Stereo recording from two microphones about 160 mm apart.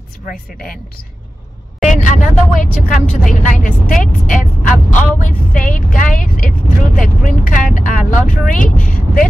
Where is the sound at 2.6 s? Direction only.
55° left (ahead or behind).